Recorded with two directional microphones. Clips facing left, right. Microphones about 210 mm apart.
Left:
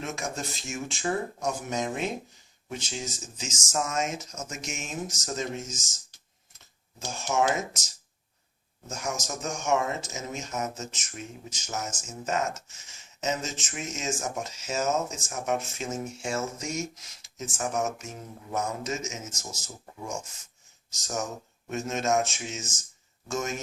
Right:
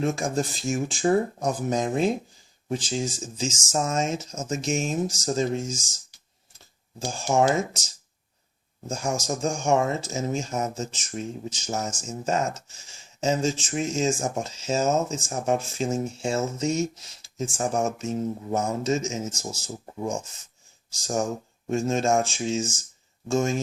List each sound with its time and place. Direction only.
0.0 s speech: 35° right (ahead or behind)
7.1 s speech: 30° right (ahead or behind)
8.9 s speech: 30° right (ahead or behind)
21.0 s speech: 30° right (ahead or behind)